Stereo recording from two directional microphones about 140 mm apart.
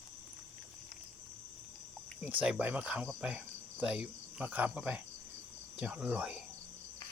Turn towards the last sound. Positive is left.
turn(degrees=-10)  # may be behind; listen again after turning